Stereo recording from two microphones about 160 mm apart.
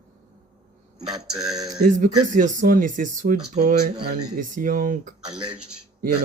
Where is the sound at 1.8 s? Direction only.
55° right (ahead or behind).